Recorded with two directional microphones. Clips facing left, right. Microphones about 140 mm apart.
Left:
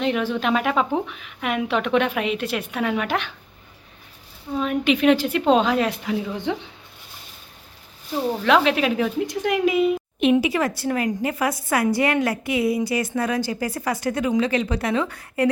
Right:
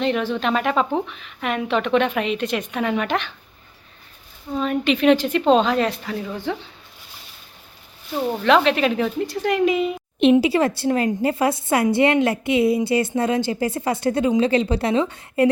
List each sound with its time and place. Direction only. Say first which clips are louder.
0.0 s a woman's voice: right 1 dB; 10° left (ahead or behind)
4.5 s a woman's voice: even; 5° left (ahead or behind)
8.4 s a woman's voice: right 2 dB; 5° left (ahead or behind)
10.4 s a woman's voice: right 4 dB; 30° right (ahead or behind)